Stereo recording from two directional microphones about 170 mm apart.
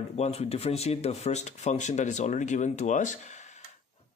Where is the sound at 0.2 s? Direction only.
40° left (ahead or behind).